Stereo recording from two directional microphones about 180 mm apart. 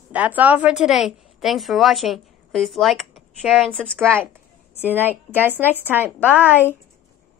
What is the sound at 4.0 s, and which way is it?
Speech, 10° right (ahead or behind).